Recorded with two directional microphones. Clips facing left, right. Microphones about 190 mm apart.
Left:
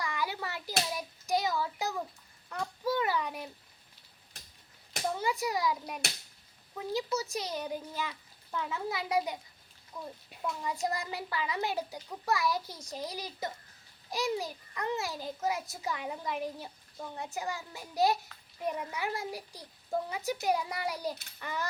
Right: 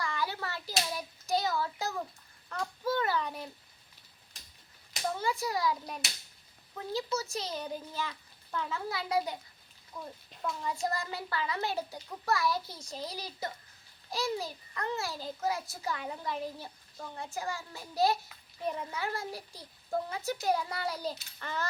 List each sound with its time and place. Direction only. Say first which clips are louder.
0.0 s hands: even; 15° left (ahead or behind)
0.9 s child singing: even; 15° left (ahead or behind)
2.5 s a sound: even; 15° left (ahead or behind)
5.2 s a child's voice: even; 15° left (ahead or behind)